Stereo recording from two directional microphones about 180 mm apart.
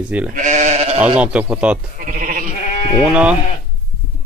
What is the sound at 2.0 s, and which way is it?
Goat, 50° right (ahead or behind).